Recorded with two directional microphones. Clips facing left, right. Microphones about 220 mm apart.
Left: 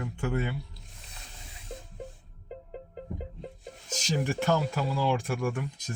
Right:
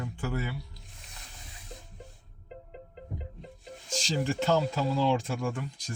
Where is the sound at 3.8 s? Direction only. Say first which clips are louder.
Even; 15° left (ahead or behind).